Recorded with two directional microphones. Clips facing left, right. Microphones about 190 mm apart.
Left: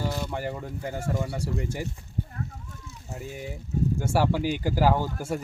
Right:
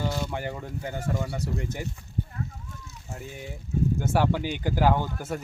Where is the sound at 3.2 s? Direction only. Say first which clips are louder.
Left 3 dB; 5° left (ahead or behind).